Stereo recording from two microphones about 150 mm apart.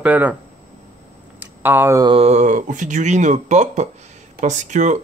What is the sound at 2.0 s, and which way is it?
Speech, 40° right (ahead or behind).